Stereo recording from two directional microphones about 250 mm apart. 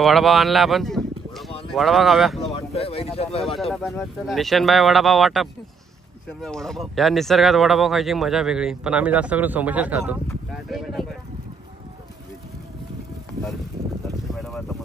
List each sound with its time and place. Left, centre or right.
0.0 s speech: centre
2.5 s speech: left
3.7 s speech: centre
14.0 s a sound: centre